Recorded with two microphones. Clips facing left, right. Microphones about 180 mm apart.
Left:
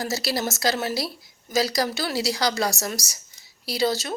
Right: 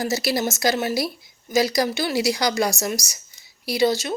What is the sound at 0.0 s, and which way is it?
Speech, 20° right (ahead or behind).